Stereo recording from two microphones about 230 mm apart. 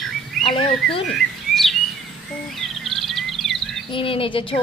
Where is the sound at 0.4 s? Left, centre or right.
Left.